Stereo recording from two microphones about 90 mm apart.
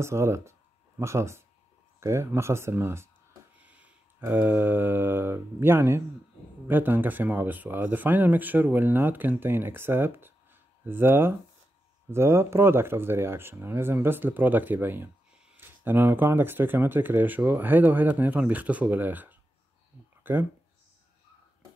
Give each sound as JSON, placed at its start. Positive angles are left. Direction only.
{"t": 0.0, "sound": "speech", "side_deg": -30}
{"t": 3.5, "sound": "a sound", "side_deg": -15}
{"t": 4.2, "sound": "speech", "side_deg": -20}